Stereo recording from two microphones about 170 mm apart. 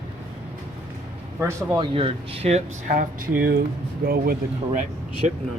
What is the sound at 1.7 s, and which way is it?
Speech, 30° right (ahead or behind).